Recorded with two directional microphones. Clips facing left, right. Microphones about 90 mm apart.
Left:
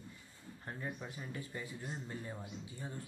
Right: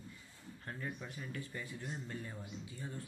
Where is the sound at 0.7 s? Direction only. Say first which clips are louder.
Left 1 dB; 20° left (ahead or behind).